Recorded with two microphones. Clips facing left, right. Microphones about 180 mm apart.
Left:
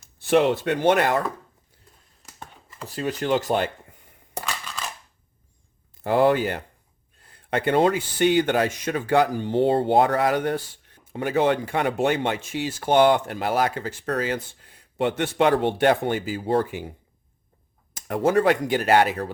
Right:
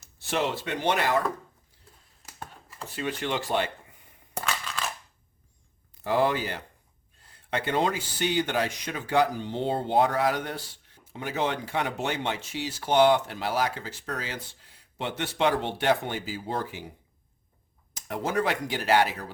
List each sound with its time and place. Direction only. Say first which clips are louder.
0.0 s speech: left 9 dB; 55° left (ahead or behind)
2.2 s a sound: right 1 dB; 5° right (ahead or behind)
2.8 s speech: left 5 dB; 40° left (ahead or behind)
4.4 s crushing: even; 15° left (ahead or behind)
6.0 s speech: left 6 dB; 55° left (ahead or behind)
18.1 s speech: left 8 dB; 50° left (ahead or behind)